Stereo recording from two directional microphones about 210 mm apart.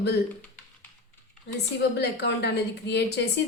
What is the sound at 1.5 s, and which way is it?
A woman's voice, 55° left (ahead or behind).